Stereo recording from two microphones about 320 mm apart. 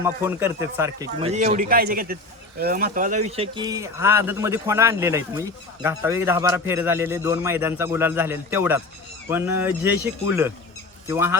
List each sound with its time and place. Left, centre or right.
0.0 s speech: centre